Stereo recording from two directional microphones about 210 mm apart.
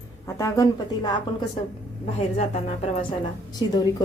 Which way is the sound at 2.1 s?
30° left (ahead or behind).